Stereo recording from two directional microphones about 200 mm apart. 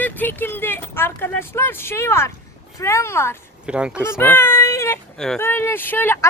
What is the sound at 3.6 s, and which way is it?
Speech, 5° right (ahead or behind).